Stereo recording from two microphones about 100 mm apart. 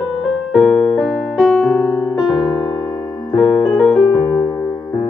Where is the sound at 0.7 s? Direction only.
15° left (ahead or behind).